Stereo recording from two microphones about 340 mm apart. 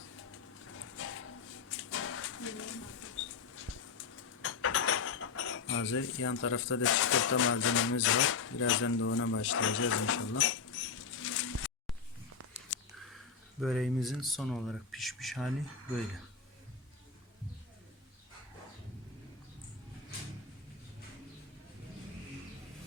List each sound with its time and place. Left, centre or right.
0.9 s a sound: left
1.7 s bird: left
4.4 s cutlery: left
13.6 s speech: centre